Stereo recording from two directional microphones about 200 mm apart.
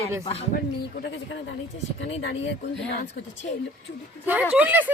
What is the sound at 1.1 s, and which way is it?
Speech, 65° left (ahead or behind).